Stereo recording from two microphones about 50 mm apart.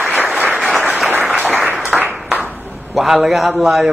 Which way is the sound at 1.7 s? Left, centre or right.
Right.